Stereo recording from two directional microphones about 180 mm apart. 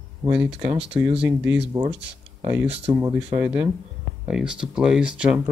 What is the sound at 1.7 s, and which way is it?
Speech, 25° right (ahead or behind).